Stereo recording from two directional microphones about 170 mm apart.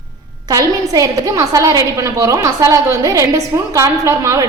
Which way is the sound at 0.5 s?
20° right (ahead or behind).